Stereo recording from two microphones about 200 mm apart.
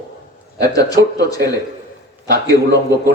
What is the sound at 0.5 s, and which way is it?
Speech, 20° left (ahead or behind).